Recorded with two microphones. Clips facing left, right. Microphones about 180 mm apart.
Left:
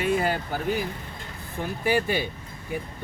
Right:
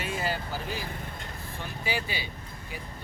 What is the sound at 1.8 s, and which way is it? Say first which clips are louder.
Speech: left 9 dB; 50° left (ahead or behind).